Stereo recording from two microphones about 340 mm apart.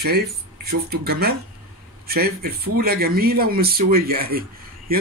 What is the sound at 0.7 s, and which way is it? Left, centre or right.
Speech, right.